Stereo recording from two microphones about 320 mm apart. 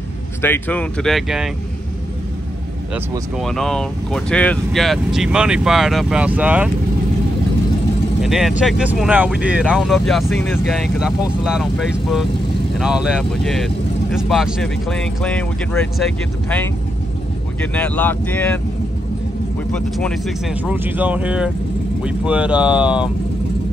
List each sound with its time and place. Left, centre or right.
0.4 s speech: centre
2.9 s speech: centre
8.2 s speech: centre
12.7 s speech: centre
19.7 s speech: centre